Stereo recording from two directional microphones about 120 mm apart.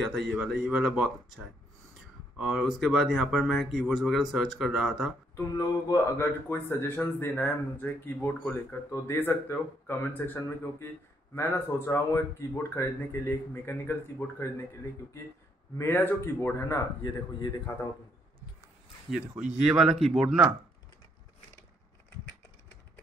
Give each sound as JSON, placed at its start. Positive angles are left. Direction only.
{"t": 0.0, "sound": "speech", "side_deg": 0}
{"t": 5.3, "sound": "speech", "side_deg": 30}
{"t": 6.1, "sound": "speech", "side_deg": 20}
{"t": 15.8, "sound": "speech", "side_deg": 15}
{"t": 19.0, "sound": "speech", "side_deg": -5}